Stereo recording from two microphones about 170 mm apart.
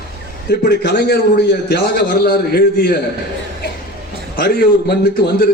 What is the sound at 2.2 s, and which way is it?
Speech, 65° left (ahead or behind).